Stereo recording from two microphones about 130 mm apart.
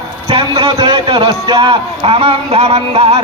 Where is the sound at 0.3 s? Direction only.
50° right (ahead or behind).